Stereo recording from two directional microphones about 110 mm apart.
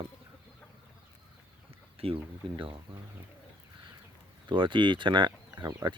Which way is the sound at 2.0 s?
55° right (ahead or behind).